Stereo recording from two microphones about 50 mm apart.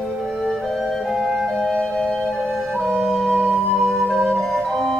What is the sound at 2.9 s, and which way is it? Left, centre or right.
Music, centre.